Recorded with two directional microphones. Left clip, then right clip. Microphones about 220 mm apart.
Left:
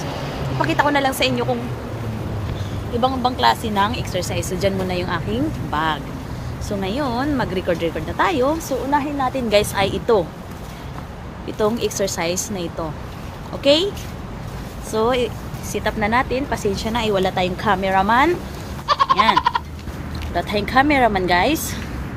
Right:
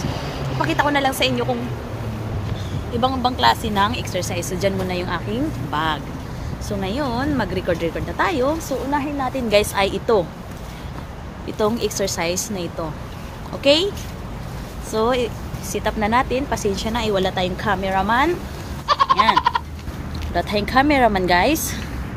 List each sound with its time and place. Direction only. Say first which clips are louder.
0.6 s speech: left 1 dB; centre (ahead or behind)
3.0 s speech: even; 10° right (ahead or behind)
8.9 s a woman's voice: left 4 dB; 10° right (ahead or behind)
11.4 s a woman's voice: left 1 dB; 20° right (ahead or behind)
13.6 s a woman's voice: even; 15° right (ahead or behind)
14.9 s a woman's voice: left 1 dB; 10° right (ahead or behind); by 18.3 s 5° left (ahead or behind)
18.9 s goat: even; centre (ahead or behind)
20.3 s speech: left 1 dB; 20° right (ahead or behind)